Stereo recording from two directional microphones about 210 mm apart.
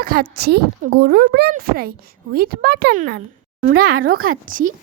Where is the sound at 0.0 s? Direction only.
45° right (ahead or behind).